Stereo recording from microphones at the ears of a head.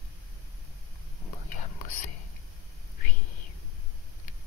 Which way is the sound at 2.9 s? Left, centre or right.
Left.